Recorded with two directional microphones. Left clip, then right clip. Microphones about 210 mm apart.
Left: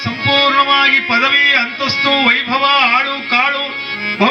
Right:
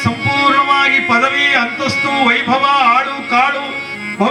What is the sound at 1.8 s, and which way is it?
Music, 55° right (ahead or behind).